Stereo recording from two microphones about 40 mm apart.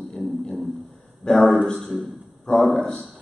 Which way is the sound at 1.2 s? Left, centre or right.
Left.